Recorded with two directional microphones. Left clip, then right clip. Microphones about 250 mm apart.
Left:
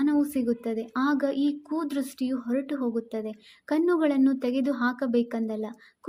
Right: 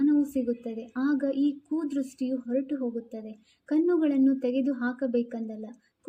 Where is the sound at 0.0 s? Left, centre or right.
Left.